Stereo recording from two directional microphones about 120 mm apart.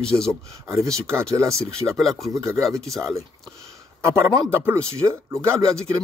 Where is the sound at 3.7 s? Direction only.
20° right (ahead or behind).